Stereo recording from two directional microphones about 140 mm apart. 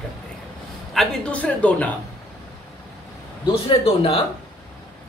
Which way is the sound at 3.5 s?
45° left (ahead or behind).